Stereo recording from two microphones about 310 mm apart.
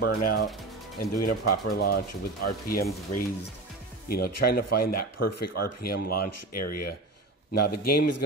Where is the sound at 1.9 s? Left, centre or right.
Left.